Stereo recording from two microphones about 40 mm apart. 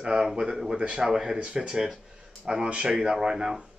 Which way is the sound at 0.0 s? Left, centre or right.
Centre.